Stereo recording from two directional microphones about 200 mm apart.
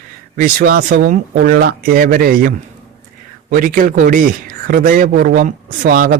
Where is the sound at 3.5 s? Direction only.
40° right (ahead or behind).